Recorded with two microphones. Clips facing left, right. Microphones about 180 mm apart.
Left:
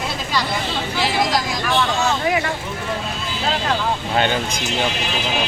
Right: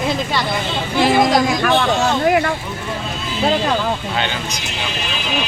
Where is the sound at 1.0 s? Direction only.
50° right (ahead or behind).